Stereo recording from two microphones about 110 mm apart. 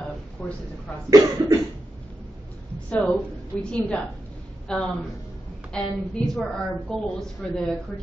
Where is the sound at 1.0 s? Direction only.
30° right (ahead or behind).